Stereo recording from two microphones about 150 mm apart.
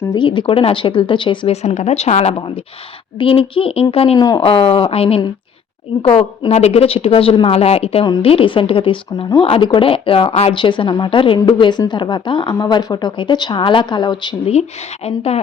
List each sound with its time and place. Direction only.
0.1 s a woman's voice: 30° left (ahead or behind)
1.6 s a woman's voice: 50° left (ahead or behind)
4.2 s speech: 25° left (ahead or behind)
4.4 s a woman's voice: 35° left (ahead or behind)
15.0 s speech: 45° left (ahead or behind)